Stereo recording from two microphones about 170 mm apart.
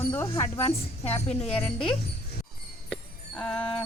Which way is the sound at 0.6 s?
35° left (ahead or behind).